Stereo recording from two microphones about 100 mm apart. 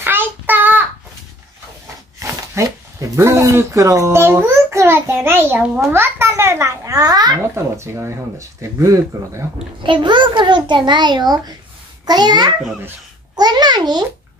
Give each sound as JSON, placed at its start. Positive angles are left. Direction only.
{"t": 0.0, "sound": "child singing", "side_deg": -20}
{"t": 2.1, "sound": "speech", "side_deg": -30}
{"t": 7.5, "sound": "speech", "side_deg": -25}
{"t": 9.8, "sound": "a child's voice", "side_deg": -55}
{"t": 13.4, "sound": "a sound", "side_deg": -45}